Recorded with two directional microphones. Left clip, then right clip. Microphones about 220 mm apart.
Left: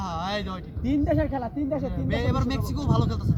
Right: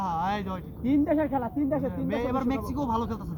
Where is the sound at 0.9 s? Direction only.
35° left (ahead or behind).